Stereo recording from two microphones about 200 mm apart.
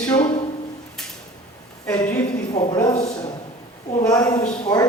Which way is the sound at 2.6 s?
15° left (ahead or behind).